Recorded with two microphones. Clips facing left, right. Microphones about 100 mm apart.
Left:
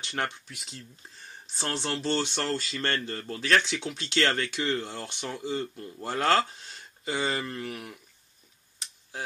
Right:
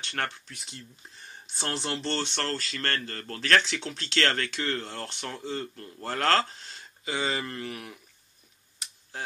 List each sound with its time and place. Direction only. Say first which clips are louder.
0.0 s speech: left 1 dB; 15° left (ahead or behind)
0.6 s speech: even; centre (ahead or behind)